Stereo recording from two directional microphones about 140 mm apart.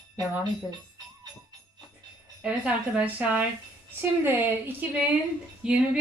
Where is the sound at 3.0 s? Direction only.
10° right (ahead or behind).